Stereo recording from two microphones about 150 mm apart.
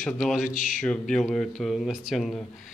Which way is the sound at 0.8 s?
5° left (ahead or behind).